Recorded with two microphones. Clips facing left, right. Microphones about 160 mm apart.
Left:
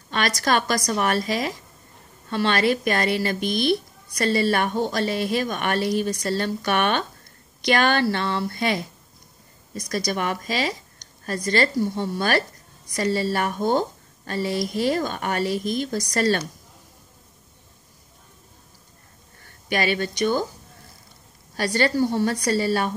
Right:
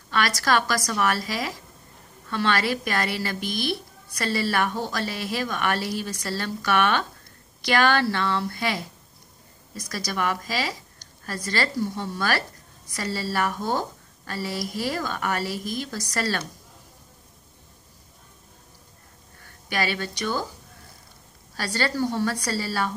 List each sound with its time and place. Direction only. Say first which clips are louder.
0.4 s speech: left 3 dB; 20° left (ahead or behind)
19.7 s speech: left 4 dB; 20° left (ahead or behind)
21.5 s speech: left 5 dB; 20° left (ahead or behind)